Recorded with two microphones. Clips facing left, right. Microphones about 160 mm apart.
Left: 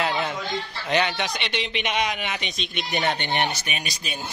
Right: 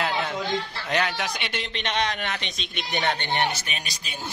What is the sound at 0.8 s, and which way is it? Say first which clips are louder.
Speech: left 4 dB; centre (ahead or behind).